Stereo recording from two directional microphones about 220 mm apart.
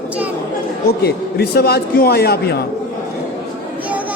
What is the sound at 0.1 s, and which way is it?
Chatter, 5° right (ahead or behind).